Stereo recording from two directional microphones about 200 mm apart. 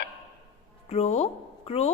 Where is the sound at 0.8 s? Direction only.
30° left (ahead or behind).